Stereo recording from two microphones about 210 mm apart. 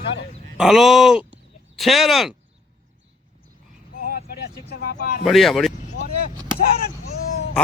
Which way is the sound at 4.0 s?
45° left (ahead or behind).